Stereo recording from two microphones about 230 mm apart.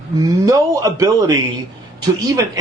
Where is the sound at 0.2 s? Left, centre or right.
Centre.